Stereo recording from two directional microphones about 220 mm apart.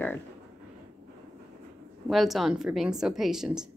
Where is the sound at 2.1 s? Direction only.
Centre (ahead or behind).